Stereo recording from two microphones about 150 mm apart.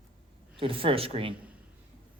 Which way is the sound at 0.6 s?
35° right (ahead or behind).